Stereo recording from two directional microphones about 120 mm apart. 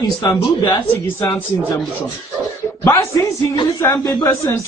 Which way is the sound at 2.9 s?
25° left (ahead or behind).